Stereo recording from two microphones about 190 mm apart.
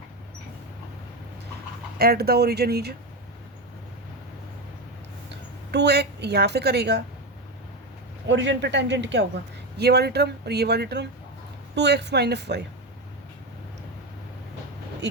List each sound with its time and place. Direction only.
2.0 s speech: 55° right (ahead or behind)
5.3 s a woman's voice: 60° right (ahead or behind)
8.3 s a man's voice: 70° right (ahead or behind)